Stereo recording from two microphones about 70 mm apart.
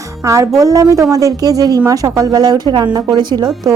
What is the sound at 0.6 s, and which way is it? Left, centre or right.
A woman's voice, right.